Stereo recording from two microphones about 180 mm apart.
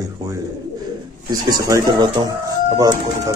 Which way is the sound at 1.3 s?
20° right (ahead or behind).